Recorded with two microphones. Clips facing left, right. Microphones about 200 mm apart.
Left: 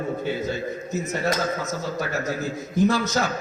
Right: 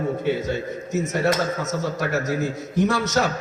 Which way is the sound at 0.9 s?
80° right.